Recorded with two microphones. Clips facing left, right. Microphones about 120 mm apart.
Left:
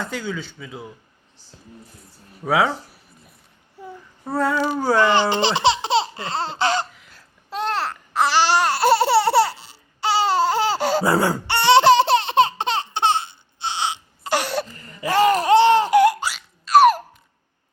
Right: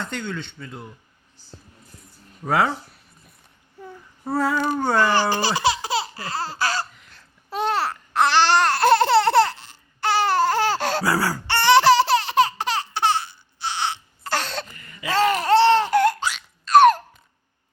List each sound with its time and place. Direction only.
0.0 s speech: 5° left (ahead or behind)
2.4 s a sound: centre (ahead or behind)
4.2 s speech: centre (ahead or behind)
4.9 s speech: 20° left (ahead or behind)
6.9 s babbling: centre (ahead or behind)
11.0 s laughter: 25° left (ahead or behind)
14.7 s a sound: 35° left (ahead or behind)
15.0 s a sound: 15° left (ahead or behind)
15.4 s laughter: 15° left (ahead or behind)